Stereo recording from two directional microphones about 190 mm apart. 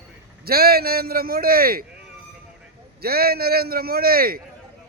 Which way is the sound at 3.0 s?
55° right (ahead or behind).